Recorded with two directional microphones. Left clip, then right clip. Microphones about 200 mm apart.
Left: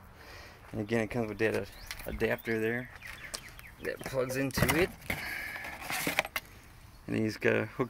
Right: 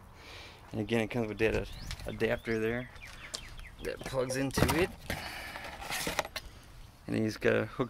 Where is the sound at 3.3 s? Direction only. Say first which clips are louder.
Right 3 dB; 20° left (ahead or behind).